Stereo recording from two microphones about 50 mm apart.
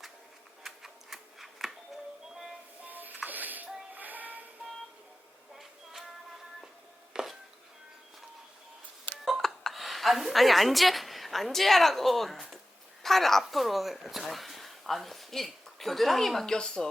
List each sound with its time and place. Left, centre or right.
0.6 s tick-tock: centre
2.3 s train: centre
2.8 s music: right
3.9 s child singing: right
5.5 s a sound: centre
7.1 s chopping: centre
9.2 s speech: centre
16.6 s speech: centre